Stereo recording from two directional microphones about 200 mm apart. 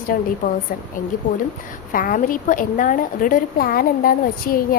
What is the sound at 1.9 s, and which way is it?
A woman's voice, 45° left (ahead or behind).